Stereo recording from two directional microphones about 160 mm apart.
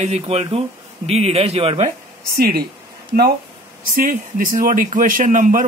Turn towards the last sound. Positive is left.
turn(degrees=-55)  # may be behind; listen again after turning